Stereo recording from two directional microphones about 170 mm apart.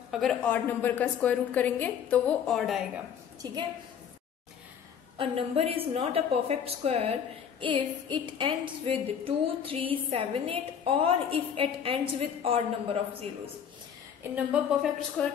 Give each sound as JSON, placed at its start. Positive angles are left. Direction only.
{"t": 0.1, "sound": "a woman's voice", "side_deg": 0}
{"t": 3.4, "sound": "a woman's voice", "side_deg": -25}
{"t": 5.1, "sound": "a sound", "side_deg": -35}
{"t": 14.3, "sound": "a woman's voice", "side_deg": -5}
{"t": 15.2, "sound": "a woman's voice", "side_deg": 5}